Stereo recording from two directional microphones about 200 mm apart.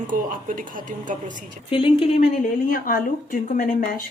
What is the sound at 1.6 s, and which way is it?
Speech, 25° left (ahead or behind).